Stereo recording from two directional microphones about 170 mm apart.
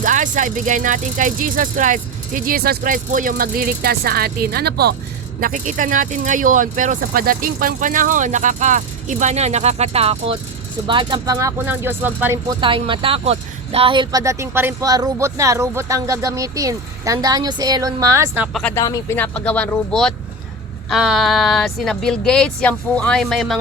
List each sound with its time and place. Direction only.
0.0 s speech: 50° right (ahead or behind); by 4.9 s 70° right (ahead or behind)
5.4 s speech: 50° right (ahead or behind); by 12.4 s 10° right (ahead or behind)
12.5 s speech: 30° right (ahead or behind)
18.5 s speech: 10° left (ahead or behind)